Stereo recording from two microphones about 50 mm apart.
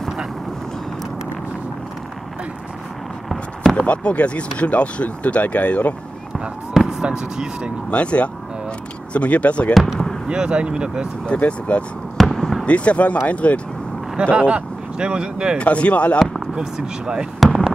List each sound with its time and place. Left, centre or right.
3.7 s speech: left
6.7 s speech: centre
7.9 s speech: left
10.2 s speech: centre
11.2 s speech: left
12.2 s fireworks: centre
12.6 s speech: left
14.3 s speech: right
15.5 s speech: left
16.5 s speech: centre